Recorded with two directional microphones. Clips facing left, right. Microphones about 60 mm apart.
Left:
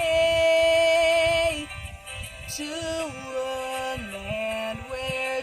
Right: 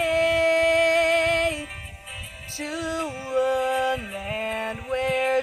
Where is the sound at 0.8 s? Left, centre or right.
Right.